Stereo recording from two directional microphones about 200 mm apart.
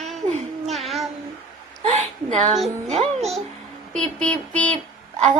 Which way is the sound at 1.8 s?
35° right (ahead or behind).